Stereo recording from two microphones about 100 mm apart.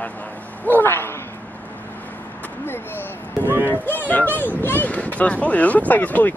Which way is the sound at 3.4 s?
20° right (ahead or behind).